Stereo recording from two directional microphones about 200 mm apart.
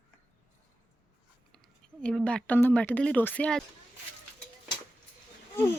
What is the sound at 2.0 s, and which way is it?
Speech, 5° left (ahead or behind).